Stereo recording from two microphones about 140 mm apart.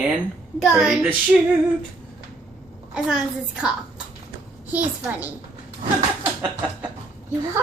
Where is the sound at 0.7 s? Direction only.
5° right (ahead or behind).